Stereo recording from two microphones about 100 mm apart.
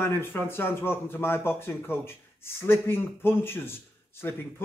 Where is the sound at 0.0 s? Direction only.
20° left (ahead or behind).